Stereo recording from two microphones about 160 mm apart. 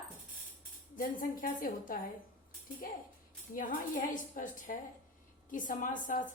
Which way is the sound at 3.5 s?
60° left (ahead or behind).